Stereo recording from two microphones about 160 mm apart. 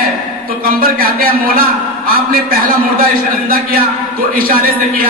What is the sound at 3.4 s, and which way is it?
A man's voice, 65° right (ahead or behind).